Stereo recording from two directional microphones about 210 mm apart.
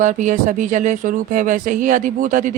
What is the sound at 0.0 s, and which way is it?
Speech, 35° right (ahead or behind).